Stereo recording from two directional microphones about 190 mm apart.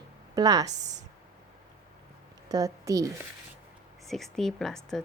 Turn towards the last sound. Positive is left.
turn(degrees=0)  # may be behind; listen again after turning